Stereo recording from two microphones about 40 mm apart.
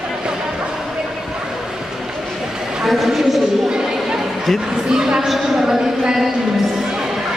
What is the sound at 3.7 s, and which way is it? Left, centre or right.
Chatter, centre.